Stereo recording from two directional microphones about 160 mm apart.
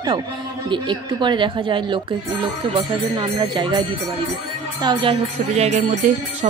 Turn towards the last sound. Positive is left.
turn(degrees=-40)  # may be behind; listen again after turning